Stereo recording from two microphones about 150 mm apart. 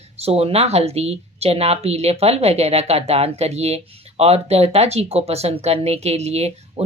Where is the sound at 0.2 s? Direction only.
40° right (ahead or behind).